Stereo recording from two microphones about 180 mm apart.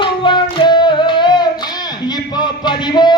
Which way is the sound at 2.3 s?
25° left (ahead or behind).